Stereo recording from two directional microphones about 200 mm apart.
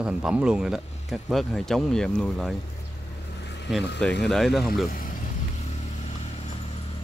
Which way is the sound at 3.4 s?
60° left (ahead or behind).